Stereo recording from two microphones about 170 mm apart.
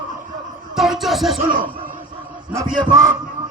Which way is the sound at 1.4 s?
55° right (ahead or behind).